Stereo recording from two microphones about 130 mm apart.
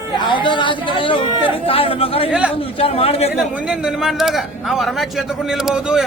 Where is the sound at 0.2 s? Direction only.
35° left (ahead or behind); by 3.3 s 55° left (ahead or behind).